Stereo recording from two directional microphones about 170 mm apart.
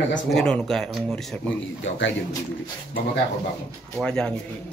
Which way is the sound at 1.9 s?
90° left.